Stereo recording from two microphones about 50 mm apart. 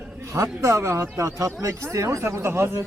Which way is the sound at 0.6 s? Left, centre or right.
Right.